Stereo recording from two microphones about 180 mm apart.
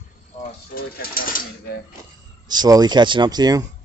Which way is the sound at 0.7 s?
55° left (ahead or behind).